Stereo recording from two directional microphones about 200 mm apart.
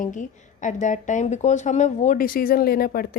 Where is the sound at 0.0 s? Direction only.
40° left (ahead or behind).